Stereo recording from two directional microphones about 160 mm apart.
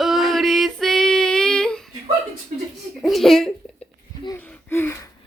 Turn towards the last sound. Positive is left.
turn(degrees=15)  # may be behind; listen again after turning